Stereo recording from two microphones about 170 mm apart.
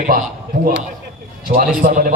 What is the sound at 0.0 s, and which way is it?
Speech, 50° right (ahead or behind).